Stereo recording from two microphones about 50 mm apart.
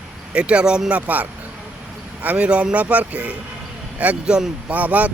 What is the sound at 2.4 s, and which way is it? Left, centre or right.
Speech, right.